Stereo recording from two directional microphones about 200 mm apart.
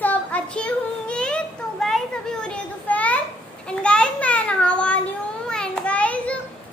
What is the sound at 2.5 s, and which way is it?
Children playing, 5° left (ahead or behind).